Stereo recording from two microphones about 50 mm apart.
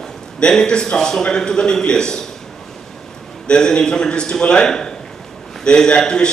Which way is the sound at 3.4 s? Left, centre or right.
Centre.